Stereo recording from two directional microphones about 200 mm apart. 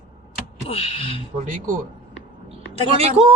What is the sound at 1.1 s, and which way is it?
Speech, 40° right (ahead or behind).